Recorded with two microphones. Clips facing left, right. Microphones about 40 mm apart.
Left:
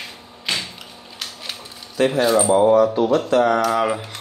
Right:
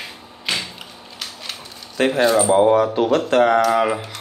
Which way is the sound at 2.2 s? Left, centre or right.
Centre.